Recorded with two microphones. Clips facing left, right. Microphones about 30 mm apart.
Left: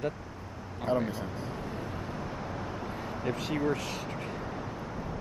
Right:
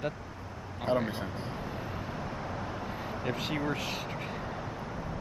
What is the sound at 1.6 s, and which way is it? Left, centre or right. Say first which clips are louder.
Vehicle: even; centre.